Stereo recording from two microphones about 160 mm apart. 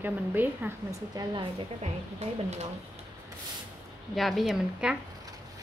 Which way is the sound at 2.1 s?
45° right (ahead or behind).